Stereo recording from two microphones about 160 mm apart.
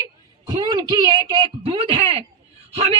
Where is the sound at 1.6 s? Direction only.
35° right (ahead or behind).